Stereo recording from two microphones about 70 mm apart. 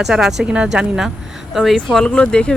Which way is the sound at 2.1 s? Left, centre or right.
Centre.